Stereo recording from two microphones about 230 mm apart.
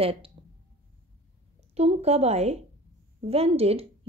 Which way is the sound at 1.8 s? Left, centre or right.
Right.